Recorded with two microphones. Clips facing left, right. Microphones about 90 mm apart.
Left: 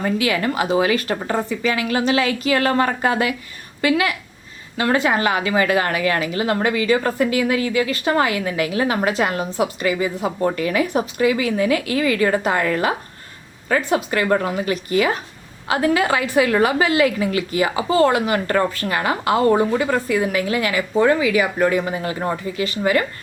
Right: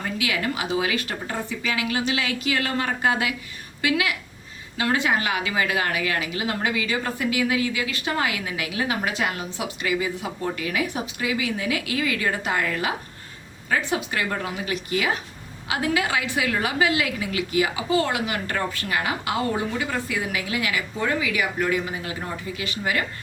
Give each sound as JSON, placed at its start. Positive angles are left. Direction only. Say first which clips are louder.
{"t": 0.2, "sound": "a woman's voice", "louder": "left 6 dB", "side_deg": 45}
{"t": 21.8, "sound": "a woman's voice", "louder": "left 7 dB", "side_deg": 50}
{"t": 22.5, "sound": "speech", "louder": "left 8 dB", "side_deg": 40}